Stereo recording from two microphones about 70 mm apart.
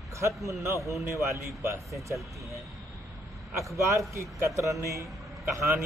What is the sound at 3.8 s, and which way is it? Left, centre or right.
Speech, right.